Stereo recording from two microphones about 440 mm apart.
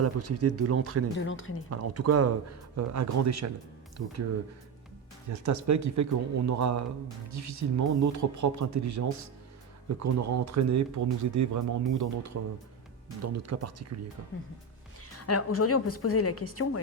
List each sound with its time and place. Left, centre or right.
0.0 s speech: right
1.2 s a woman's voice: left
1.7 s speech: right
5.3 s speech: right
15.3 s a woman's voice: left